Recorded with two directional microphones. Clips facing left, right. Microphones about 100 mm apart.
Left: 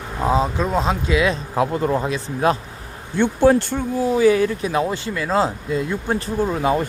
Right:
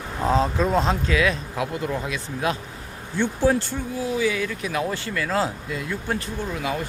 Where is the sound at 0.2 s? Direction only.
10° left (ahead or behind).